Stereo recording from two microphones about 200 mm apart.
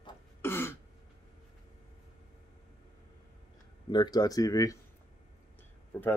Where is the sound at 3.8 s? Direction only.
20° left (ahead or behind).